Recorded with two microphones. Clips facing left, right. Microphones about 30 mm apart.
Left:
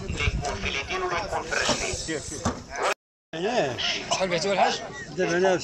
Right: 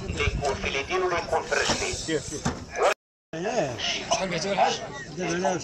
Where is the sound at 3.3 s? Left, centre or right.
Left.